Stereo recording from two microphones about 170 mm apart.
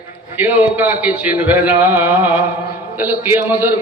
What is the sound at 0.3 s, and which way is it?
A man's voice, 10° right (ahead or behind).